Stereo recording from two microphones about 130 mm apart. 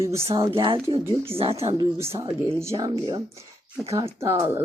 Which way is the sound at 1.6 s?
30° right (ahead or behind).